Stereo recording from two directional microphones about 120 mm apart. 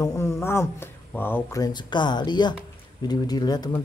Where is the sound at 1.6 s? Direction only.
40° left (ahead or behind).